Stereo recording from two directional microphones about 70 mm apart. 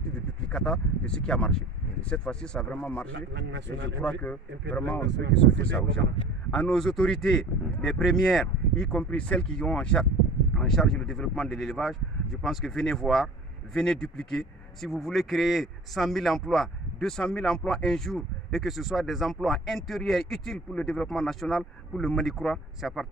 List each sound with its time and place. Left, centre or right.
0.5 s speech: centre
8.9 s speech: centre